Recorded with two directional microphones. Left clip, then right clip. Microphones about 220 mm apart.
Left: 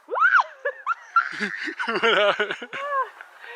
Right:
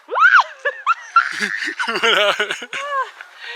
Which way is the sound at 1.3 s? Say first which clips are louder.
Right 7 dB; 5° left (ahead or behind).